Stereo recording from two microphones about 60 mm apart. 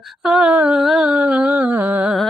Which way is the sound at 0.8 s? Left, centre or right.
Centre.